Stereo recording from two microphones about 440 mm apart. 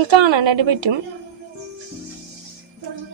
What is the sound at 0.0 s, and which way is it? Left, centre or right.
Speech, right.